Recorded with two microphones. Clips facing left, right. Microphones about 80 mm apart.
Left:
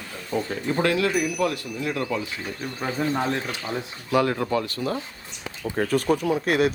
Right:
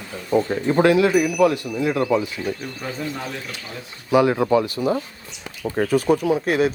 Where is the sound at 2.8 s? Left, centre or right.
Left.